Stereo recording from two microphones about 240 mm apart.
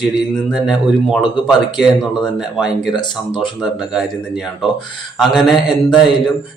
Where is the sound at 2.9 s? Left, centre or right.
Centre.